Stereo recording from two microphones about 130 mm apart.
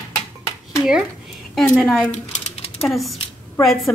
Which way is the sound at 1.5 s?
Centre (ahead or behind).